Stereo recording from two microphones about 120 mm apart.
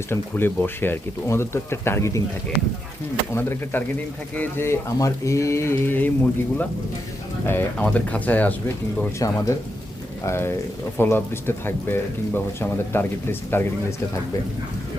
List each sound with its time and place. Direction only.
0.1 s speech: 15° left (ahead or behind)
3.3 s speech: 20° left (ahead or behind)
7.4 s speech: 15° left (ahead or behind)
9.1 s speech: 25° left (ahead or behind)